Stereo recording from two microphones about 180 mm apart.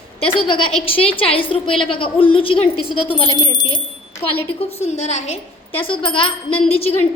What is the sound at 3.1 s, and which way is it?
Speech, 25° left (ahead or behind).